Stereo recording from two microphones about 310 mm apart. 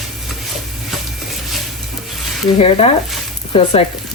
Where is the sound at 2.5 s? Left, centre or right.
Centre.